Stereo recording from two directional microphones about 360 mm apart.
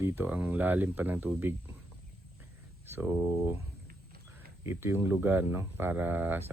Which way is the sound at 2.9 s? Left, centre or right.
Centre.